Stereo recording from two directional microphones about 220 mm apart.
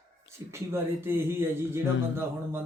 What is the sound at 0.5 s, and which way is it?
Speech, 10° right (ahead or behind).